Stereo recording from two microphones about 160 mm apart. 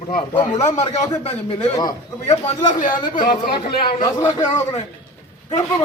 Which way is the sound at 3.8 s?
30° left (ahead or behind).